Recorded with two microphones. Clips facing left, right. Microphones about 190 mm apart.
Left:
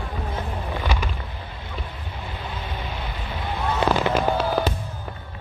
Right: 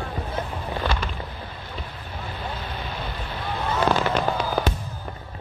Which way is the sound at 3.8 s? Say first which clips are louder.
Left 2 dB; 5° left (ahead or behind).